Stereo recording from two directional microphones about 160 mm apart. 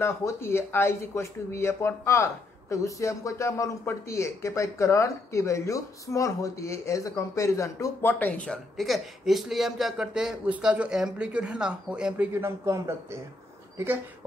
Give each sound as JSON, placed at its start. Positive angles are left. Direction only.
{"t": 0.0, "sound": "speech", "side_deg": 15}